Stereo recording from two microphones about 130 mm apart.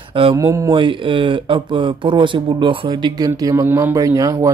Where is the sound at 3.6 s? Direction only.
20° right (ahead or behind).